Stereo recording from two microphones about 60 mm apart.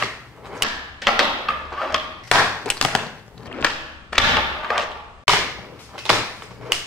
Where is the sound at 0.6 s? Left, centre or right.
Centre.